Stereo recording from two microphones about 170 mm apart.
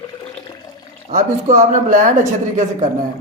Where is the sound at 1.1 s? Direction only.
45° right (ahead or behind).